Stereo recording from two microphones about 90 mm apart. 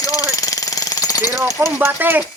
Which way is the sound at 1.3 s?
30° right (ahead or behind).